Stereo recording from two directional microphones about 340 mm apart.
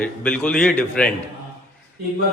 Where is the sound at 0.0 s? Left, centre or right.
Centre.